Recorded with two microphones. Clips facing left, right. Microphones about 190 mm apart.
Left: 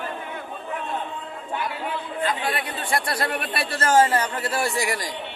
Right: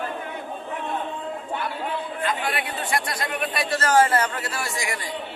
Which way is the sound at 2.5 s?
30° left (ahead or behind).